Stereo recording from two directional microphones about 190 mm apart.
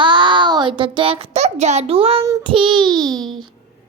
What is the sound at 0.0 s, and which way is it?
A child's voice, 25° right (ahead or behind).